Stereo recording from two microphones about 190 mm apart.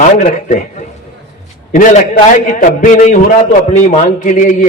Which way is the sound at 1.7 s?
45° left (ahead or behind).